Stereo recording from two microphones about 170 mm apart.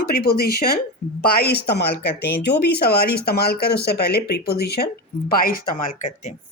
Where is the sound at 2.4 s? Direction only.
85° left.